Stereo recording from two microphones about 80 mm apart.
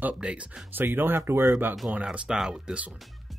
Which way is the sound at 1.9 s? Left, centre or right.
Centre.